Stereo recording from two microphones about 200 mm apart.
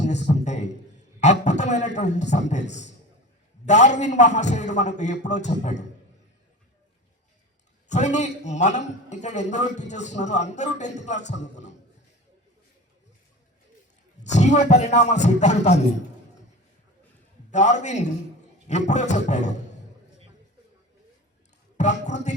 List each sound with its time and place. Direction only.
0.0 s a sound: 35° left (ahead or behind)
1.2 s a man's voice: 35° left (ahead or behind)
7.9 s a man's voice: 35° left (ahead or behind)
14.3 s a man's voice: 35° left (ahead or behind)
17.5 s a man's voice: 35° left (ahead or behind)
21.8 s a man's voice: 35° left (ahead or behind)